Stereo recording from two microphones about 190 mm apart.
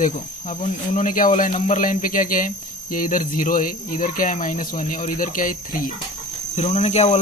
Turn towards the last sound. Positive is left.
turn(degrees=35)  # may be behind; listen again after turning